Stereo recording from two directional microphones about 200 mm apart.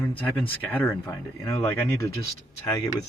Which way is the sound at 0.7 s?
10° left (ahead or behind).